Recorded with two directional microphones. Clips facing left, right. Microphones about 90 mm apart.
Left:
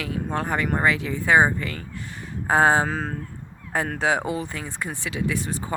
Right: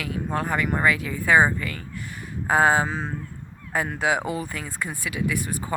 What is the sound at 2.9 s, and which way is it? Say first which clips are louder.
Speech: left 2 dB; 55° left (ahead or behind).